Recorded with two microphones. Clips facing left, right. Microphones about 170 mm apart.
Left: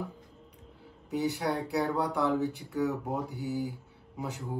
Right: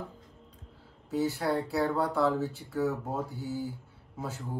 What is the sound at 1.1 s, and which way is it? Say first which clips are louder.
Speech: right 1 dB; 20° left (ahead or behind).